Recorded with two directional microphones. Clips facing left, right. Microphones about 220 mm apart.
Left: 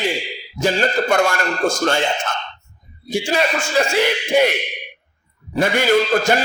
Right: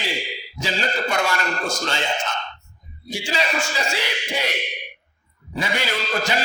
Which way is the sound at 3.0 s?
50° left (ahead or behind).